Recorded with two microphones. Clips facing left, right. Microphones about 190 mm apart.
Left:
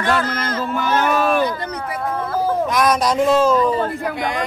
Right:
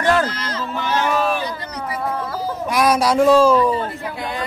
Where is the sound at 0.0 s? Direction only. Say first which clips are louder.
Right 2 dB; 45° right (ahead or behind).